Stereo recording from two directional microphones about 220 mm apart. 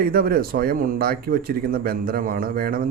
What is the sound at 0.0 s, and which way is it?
A man's voice, 40° right (ahead or behind).